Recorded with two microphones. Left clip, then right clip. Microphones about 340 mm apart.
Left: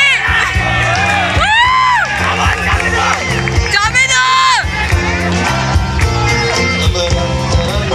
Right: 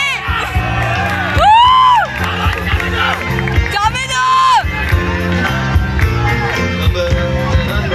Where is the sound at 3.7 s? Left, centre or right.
Centre.